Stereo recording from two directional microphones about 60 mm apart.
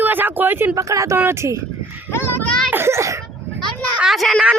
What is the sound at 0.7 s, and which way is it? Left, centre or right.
Speech, right.